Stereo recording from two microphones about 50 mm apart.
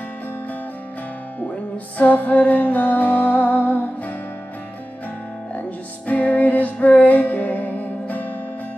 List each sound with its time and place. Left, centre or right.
2.0 s music: left
6.0 s music: left